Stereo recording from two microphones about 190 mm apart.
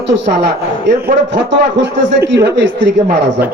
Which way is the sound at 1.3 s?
70° right (ahead or behind).